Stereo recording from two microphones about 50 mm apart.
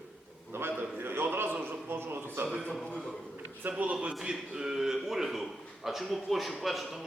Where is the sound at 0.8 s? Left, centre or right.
Right.